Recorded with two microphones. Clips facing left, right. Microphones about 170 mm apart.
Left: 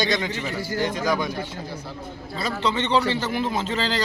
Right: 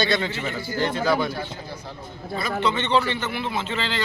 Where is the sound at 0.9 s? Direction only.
15° left (ahead or behind).